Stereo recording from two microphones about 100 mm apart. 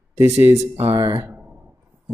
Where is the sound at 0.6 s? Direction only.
90° right.